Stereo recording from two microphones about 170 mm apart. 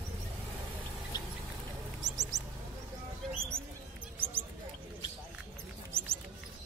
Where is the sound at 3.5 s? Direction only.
15° right (ahead or behind).